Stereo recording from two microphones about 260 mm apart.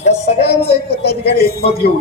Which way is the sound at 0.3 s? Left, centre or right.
Left.